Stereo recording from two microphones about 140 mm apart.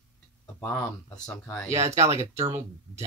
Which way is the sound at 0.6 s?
15° left (ahead or behind).